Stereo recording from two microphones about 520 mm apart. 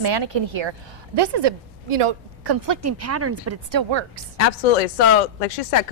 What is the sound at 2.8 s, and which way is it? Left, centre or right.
Speech, right.